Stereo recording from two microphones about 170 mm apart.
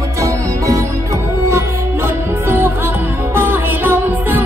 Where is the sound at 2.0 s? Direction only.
15° right (ahead or behind).